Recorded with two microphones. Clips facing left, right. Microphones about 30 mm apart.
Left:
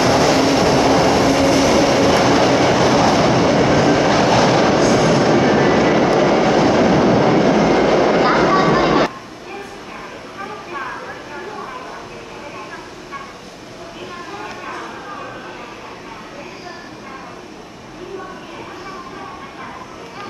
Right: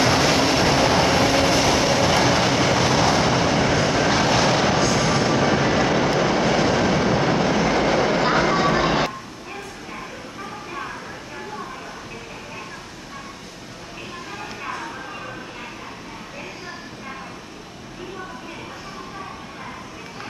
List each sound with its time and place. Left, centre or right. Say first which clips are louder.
0.0 s train: left 4 dB; centre